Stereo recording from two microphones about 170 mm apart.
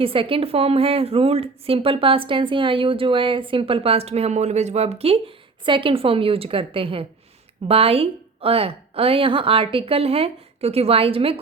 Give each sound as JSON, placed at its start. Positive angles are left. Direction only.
{"t": 0.0, "sound": "a woman's voice", "side_deg": -30}